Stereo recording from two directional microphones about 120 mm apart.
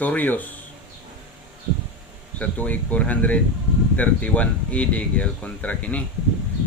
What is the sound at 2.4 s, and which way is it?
Speech, 10° left (ahead or behind).